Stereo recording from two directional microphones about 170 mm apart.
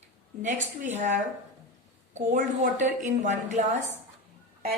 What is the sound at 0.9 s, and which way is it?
A woman's voice, 45° right (ahead or behind).